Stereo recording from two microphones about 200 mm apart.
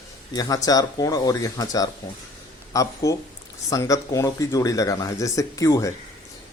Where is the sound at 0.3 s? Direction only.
20° left (ahead or behind).